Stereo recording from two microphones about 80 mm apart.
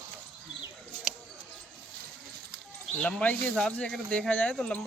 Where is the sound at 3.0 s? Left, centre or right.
Centre.